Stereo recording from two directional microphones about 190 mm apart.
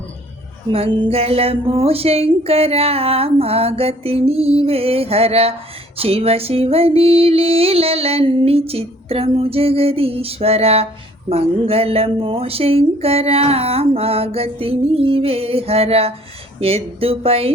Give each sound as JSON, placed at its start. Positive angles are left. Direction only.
{"t": 0.7, "sound": "female singing", "side_deg": -30}